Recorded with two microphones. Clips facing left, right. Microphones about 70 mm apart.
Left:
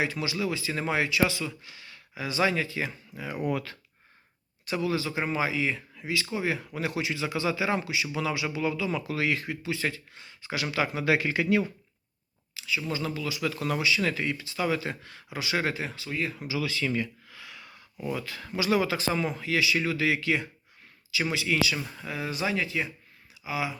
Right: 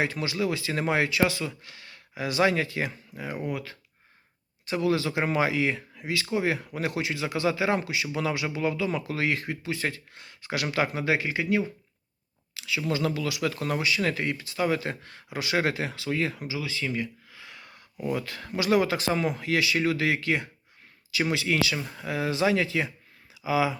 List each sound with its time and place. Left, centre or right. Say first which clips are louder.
0.0 s speech: right 2 dB; right
3.4 s speech: left 6 dB; centre
4.8 s speech: right 4 dB; right
11.0 s speech: left 1 dB; right
12.5 s speech: right 3 dB; right
13.5 s speech: even; right
15.7 s speech: right 4 dB; right
16.5 s speech: left 2 dB; centre
17.4 s a sound: even; right
18.0 s speech: right 3 dB; right
21.9 s speech: right 5 dB; right